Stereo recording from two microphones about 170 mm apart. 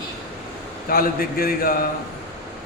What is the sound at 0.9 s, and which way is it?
Mantra, 60° left (ahead or behind).